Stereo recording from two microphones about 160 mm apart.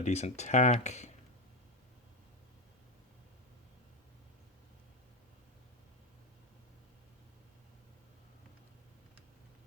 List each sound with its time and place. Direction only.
0.0 s speech: 45° left (ahead or behind)